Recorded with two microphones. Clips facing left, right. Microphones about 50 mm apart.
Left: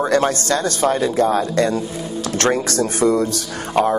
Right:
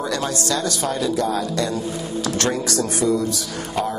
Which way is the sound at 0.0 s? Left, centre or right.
Left.